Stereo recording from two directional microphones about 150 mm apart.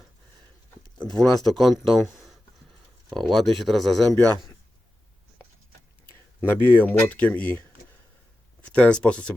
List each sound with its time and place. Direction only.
1.1 s speech: centre (ahead or behind)
6.4 s speech: 15° left (ahead or behind)